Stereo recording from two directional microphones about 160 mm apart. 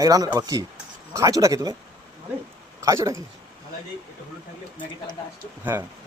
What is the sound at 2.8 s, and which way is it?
Speech, 20° right (ahead or behind).